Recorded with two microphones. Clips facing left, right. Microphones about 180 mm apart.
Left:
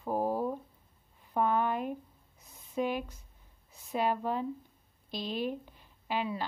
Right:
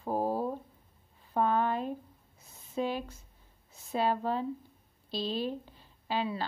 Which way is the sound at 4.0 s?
15° left (ahead or behind).